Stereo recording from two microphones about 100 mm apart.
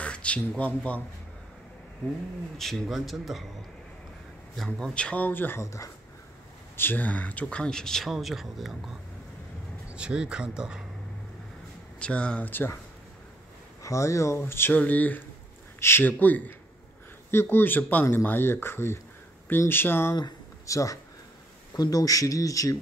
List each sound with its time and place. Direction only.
0.0 s speech: 10° left (ahead or behind)
2.5 s a man's voice: centre (ahead or behind)
4.6 s speech: 10° left (ahead or behind); by 5.9 s 30° left (ahead or behind)
6.8 s speech: 20° left (ahead or behind); by 10.8 s 10° right (ahead or behind)
12.0 s speech: 10° left (ahead or behind)
13.8 s speech: 30° left (ahead or behind)